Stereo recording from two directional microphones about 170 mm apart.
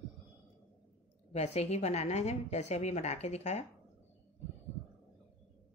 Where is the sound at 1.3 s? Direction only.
40° left (ahead or behind).